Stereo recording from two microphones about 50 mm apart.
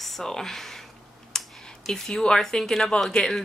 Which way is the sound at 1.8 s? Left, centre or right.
Centre.